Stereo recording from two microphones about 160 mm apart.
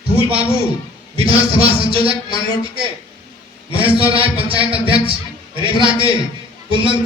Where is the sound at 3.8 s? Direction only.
35° right (ahead or behind).